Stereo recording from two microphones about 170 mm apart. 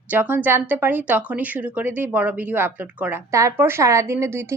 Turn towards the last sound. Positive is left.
turn(degrees=-15)  # may be behind; listen again after turning